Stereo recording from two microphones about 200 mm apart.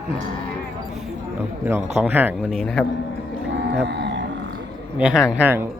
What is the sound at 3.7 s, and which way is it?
Mantra, 60° right (ahead or behind).